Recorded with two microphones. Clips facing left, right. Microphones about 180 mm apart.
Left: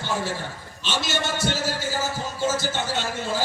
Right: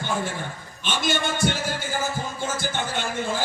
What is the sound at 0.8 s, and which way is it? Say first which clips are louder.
Music: right 2 dB; 50° right (ahead or behind).